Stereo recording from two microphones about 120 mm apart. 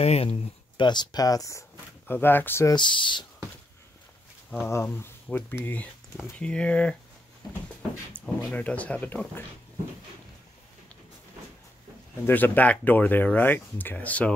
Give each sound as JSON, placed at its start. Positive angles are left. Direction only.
{"t": 0.0, "sound": "speech", "side_deg": 55}
{"t": 2.0, "sound": "speech", "side_deg": 15}
{"t": 2.7, "sound": "speech", "side_deg": 40}
{"t": 4.6, "sound": "speech", "side_deg": 20}
{"t": 8.2, "sound": "a sound", "side_deg": 10}
{"t": 8.5, "sound": "speech", "side_deg": 15}
{"t": 12.3, "sound": "speech", "side_deg": 15}